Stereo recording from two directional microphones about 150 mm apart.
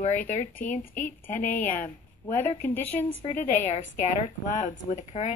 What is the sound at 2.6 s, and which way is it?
Speech, 10° left (ahead or behind).